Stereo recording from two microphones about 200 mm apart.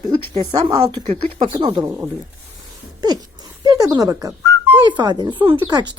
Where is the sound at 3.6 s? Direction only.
20° right (ahead or behind).